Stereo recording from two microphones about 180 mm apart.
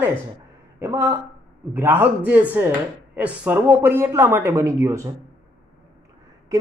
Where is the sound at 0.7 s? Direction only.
10° right (ahead or behind).